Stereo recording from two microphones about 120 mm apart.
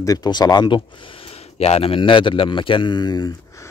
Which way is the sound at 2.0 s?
45° left (ahead or behind).